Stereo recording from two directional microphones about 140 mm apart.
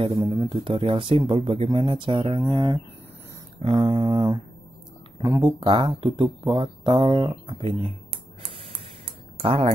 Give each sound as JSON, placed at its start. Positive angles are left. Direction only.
{"t": 0.0, "sound": "speech", "side_deg": -40}
{"t": 0.3, "sound": "speech", "side_deg": -30}
{"t": 5.4, "sound": "speech", "side_deg": -35}
{"t": 9.4, "sound": "speech", "side_deg": -45}